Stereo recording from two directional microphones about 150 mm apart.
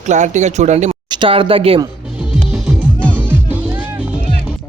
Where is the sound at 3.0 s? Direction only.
10° left (ahead or behind).